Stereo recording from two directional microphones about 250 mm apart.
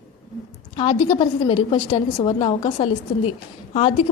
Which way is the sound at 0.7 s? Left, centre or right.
Centre.